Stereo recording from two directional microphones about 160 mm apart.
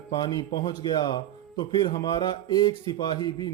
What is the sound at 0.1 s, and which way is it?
A man's voice, 25° left (ahead or behind).